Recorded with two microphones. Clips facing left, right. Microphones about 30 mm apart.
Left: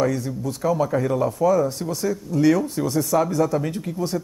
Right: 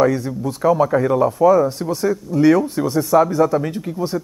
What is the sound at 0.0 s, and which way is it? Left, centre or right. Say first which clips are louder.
Speech: right 5 dB; centre.